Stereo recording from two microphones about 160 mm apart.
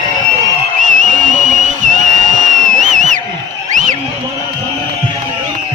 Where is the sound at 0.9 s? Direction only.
55° right (ahead or behind).